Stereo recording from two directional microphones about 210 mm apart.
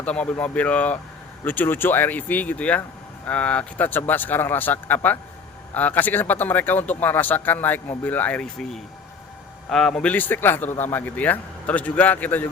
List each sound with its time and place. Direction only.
0.0 s speech: 5° left (ahead or behind)